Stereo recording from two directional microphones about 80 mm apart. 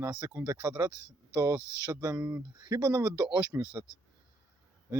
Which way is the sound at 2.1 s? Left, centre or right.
Centre.